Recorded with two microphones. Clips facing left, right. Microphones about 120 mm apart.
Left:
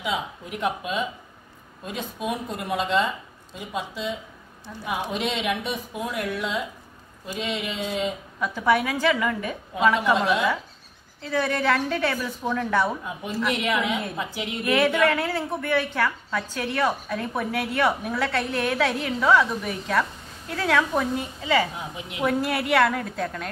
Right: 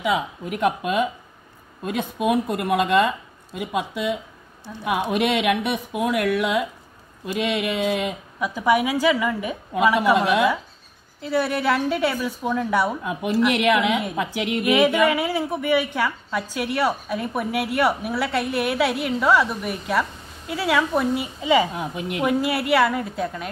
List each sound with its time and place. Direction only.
0.0 s speech: 55° right (ahead or behind)
8.4 s a woman's voice: 10° right (ahead or behind)
10.1 s speech: 60° right (ahead or behind)
11.1 s a woman's voice: 10° right (ahead or behind)
13.0 s a woman's voice: 70° right (ahead or behind)
14.6 s a woman's voice: 15° right (ahead or behind)
21.4 s a woman's voice: 15° right (ahead or behind)
21.7 s speech: 60° right (ahead or behind)
22.2 s a woman's voice: 5° right (ahead or behind)